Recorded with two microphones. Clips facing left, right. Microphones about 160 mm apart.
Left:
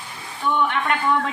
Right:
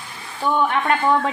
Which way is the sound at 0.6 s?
40° right (ahead or behind).